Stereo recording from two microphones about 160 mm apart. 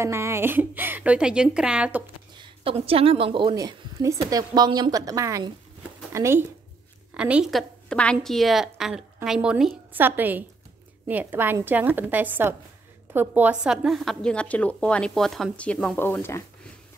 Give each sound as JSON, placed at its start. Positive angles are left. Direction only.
{"t": 0.0, "sound": "a woman's voice", "side_deg": -15}
{"t": 2.3, "sound": "a woman's voice", "side_deg": -30}
{"t": 3.5, "sound": "a woman's voice", "side_deg": -20}